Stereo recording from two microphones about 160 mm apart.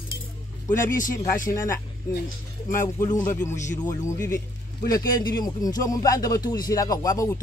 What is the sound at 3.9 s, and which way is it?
A man's voice, 20° left (ahead or behind).